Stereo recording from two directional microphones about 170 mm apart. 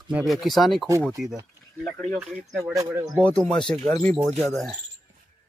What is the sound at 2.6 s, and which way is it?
Speech, 20° right (ahead or behind).